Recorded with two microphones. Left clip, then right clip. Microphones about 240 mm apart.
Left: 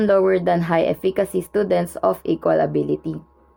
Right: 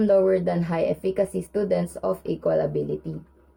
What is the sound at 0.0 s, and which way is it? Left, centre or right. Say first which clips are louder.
Speech: left 3 dB; left.